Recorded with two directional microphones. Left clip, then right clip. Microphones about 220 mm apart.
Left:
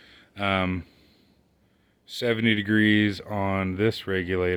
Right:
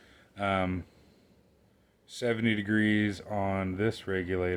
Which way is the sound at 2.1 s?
40° left (ahead or behind).